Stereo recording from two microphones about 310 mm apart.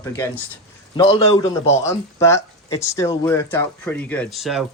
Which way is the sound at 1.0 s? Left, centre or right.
Centre.